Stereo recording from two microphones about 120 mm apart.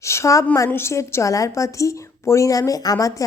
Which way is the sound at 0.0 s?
25° left (ahead or behind).